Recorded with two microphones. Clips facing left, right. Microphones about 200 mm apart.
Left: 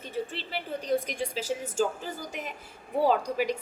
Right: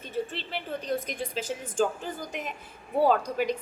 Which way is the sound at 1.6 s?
10° left (ahead or behind).